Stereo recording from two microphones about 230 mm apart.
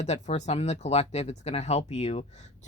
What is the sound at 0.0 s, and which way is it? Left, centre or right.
Speech, left.